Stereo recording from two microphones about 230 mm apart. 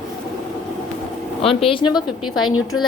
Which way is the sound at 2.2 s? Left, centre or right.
Left.